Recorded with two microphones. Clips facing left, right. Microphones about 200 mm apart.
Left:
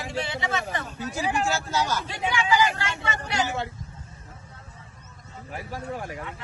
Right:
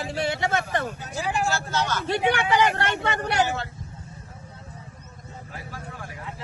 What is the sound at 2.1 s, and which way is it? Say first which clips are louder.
Speech: right 3 dB; 65° right (ahead or behind).